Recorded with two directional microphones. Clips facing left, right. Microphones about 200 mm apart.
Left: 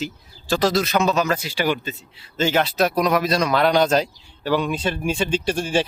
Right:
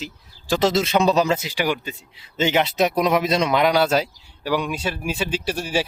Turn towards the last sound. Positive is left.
turn(degrees=-5)  # may be behind; listen again after turning